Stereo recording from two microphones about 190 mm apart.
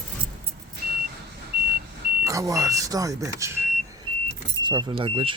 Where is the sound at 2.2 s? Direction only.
15° right (ahead or behind).